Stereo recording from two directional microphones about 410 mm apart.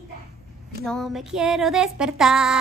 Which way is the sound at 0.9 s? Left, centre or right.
Centre.